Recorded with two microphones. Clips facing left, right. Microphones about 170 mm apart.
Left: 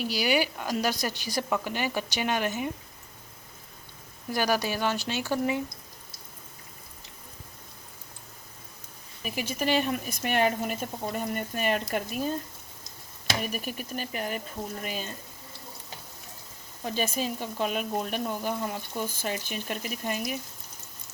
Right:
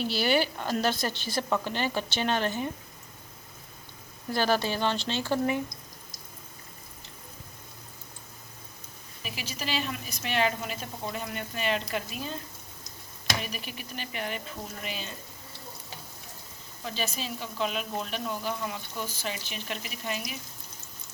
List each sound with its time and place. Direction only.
0.0 s a woman's voice: 10° left (ahead or behind)
4.3 s a woman's voice: 15° left (ahead or behind)
9.2 s speech: 50° left (ahead or behind)
13.4 s speech: 45° left (ahead or behind)
16.8 s speech: 50° left (ahead or behind)